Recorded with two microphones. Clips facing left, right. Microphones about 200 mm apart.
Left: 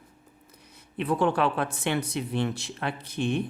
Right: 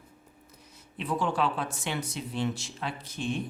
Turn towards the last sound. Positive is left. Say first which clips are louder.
# left 5 dB
turn(degrees=60)  # may be behind; listen again after turning